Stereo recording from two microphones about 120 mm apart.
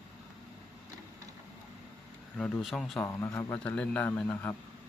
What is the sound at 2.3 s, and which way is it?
Speech, 10° left (ahead or behind).